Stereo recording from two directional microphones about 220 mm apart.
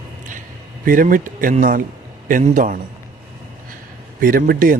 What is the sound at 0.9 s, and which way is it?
Speech, 40° right (ahead or behind).